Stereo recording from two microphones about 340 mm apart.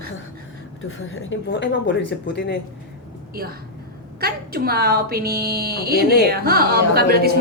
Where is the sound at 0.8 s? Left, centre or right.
Left.